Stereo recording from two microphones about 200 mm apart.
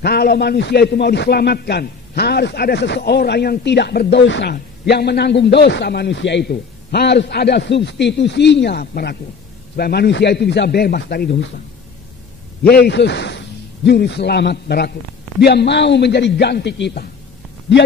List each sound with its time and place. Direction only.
0.0 s a man's voice: 50° left (ahead or behind)
12.6 s a man's voice: 55° left (ahead or behind)